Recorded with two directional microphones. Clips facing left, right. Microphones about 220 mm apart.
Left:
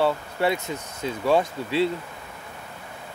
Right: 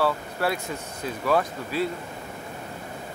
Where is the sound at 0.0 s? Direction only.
20° left (ahead or behind).